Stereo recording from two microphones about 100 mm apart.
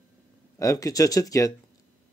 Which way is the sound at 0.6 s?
35° left (ahead or behind).